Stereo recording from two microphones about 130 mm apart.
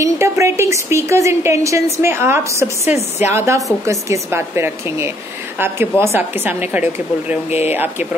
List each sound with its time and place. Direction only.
0.0 s a woman's voice: 20° right (ahead or behind)
7.4 s speech: 55° left (ahead or behind)
7.7 s a woman's voice: 15° right (ahead or behind)